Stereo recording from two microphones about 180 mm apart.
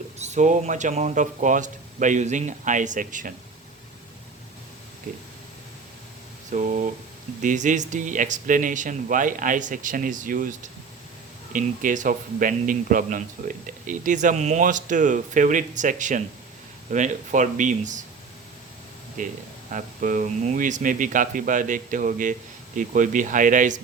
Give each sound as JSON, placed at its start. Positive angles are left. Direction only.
{"t": 0.2, "sound": "speech", "side_deg": -40}
{"t": 6.5, "sound": "speech", "side_deg": -45}
{"t": 19.2, "sound": "speech", "side_deg": -50}